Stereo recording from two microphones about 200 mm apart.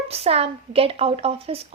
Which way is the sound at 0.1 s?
30° right (ahead or behind).